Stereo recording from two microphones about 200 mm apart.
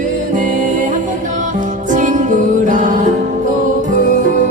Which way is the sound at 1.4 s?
40° right (ahead or behind).